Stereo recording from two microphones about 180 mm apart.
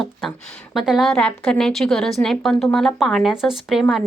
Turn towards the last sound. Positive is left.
turn(degrees=0)  # may be behind; listen again after turning